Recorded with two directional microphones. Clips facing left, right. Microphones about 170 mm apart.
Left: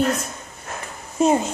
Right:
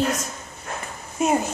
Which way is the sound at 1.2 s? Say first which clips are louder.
Left 3 dB; 25° left (ahead or behind).